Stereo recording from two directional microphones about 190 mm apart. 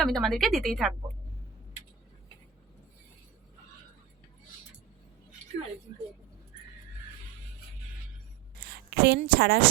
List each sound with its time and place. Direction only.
0.0 s speech: centre (ahead or behind)
8.6 s speech: 55° right (ahead or behind)